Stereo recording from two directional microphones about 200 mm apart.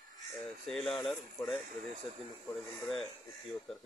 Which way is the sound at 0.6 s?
5° left (ahead or behind).